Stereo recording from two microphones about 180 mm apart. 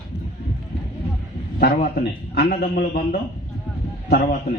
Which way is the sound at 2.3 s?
60° left (ahead or behind).